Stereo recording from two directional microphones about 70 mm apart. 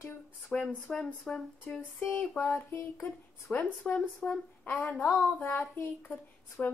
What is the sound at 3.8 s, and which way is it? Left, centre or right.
Speech, centre.